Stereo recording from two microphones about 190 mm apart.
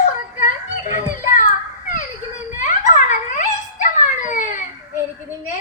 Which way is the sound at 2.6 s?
40° left (ahead or behind).